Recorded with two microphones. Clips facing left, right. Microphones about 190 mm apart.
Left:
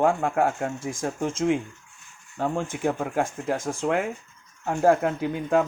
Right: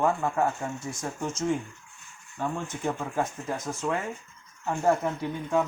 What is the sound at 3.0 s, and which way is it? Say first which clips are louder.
Speech: left 4 dB; 55° left (ahead or behind).